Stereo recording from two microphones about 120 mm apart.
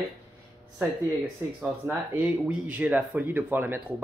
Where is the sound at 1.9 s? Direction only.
10° right (ahead or behind).